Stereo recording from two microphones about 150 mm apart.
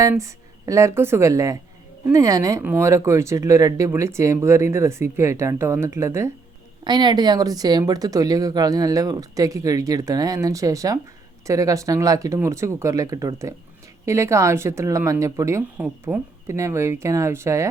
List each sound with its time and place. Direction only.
0.0 s speech: 20° right (ahead or behind)
6.8 s speech: 30° right (ahead or behind)
15.8 s speech: 10° right (ahead or behind)
16.5 s speech: 20° right (ahead or behind)